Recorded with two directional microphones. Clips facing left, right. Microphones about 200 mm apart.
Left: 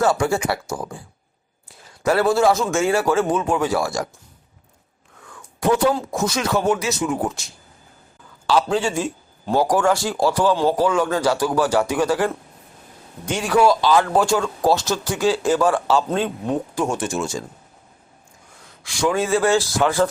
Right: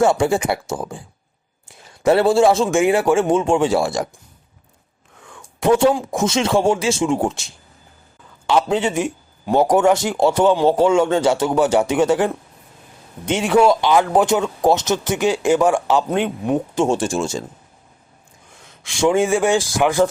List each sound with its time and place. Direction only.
0.0 s a man's voice: 20° right (ahead or behind)
5.2 s a sound: 25° right (ahead or behind)
6.1 s speech: 25° right (ahead or behind)
18.6 s speech: 25° right (ahead or behind)